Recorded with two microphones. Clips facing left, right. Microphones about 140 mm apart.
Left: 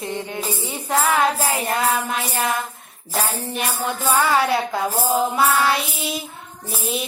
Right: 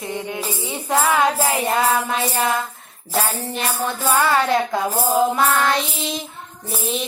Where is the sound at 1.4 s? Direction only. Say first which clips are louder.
Right 2 dB; 20° right (ahead or behind).